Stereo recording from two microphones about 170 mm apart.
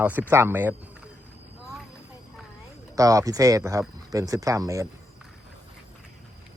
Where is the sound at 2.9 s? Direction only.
20° right (ahead or behind).